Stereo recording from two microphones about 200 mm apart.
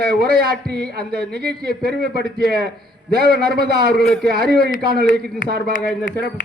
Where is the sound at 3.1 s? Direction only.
50° right (ahead or behind).